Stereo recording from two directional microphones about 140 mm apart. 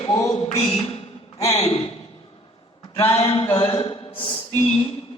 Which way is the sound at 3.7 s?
40° left (ahead or behind).